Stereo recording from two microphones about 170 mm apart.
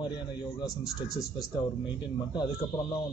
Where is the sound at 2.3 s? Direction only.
25° left (ahead or behind).